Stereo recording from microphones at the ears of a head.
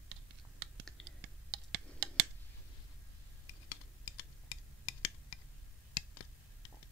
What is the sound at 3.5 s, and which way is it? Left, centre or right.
Computer keyboard, left.